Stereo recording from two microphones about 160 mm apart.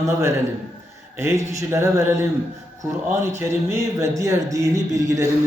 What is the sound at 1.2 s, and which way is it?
Speech, 20° right (ahead or behind).